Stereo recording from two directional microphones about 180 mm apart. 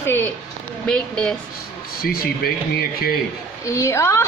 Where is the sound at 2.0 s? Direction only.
55° left (ahead or behind).